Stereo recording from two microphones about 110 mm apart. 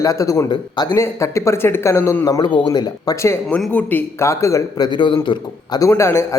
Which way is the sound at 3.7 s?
15° left (ahead or behind).